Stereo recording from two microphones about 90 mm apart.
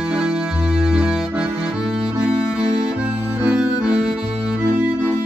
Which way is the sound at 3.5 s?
10° right (ahead or behind).